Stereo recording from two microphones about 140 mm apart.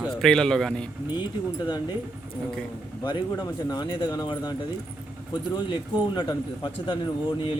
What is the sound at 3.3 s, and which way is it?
A man's voice, 25° left (ahead or behind).